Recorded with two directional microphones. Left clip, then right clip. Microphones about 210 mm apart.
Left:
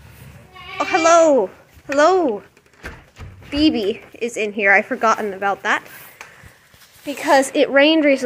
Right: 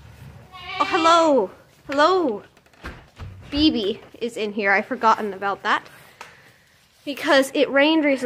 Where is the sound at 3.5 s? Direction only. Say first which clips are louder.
Left 2 dB; 25° left (ahead or behind).